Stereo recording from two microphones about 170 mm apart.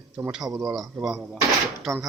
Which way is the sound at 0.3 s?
5° right (ahead or behind).